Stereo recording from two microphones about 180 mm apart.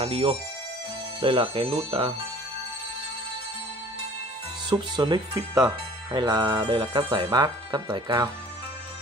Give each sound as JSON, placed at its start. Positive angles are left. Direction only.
{"t": 0.0, "sound": "speech", "side_deg": -30}
{"t": 4.6, "sound": "speech", "side_deg": -25}